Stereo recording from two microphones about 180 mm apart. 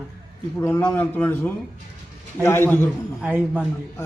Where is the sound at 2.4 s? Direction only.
15° left (ahead or behind).